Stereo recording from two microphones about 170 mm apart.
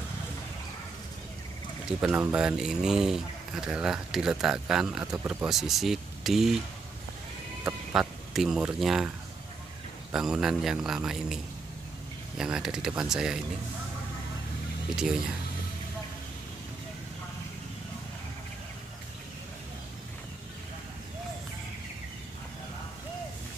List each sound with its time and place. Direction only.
1.9 s speech: 5° right (ahead or behind)
7.6 s speech: 5° right (ahead or behind)
10.1 s speech: 5° right (ahead or behind)